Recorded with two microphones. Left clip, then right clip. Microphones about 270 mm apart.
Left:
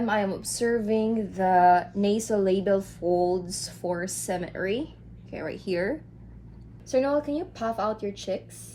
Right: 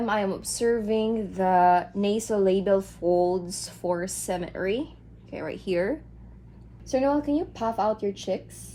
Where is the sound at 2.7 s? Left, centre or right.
Right.